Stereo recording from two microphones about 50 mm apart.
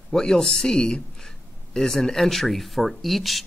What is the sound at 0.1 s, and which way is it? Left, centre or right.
Speech, centre.